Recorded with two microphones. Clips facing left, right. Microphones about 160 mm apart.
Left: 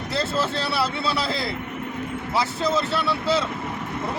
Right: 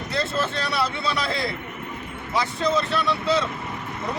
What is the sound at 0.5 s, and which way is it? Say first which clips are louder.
Speech: left 1 dB; 30° left (ahead or behind).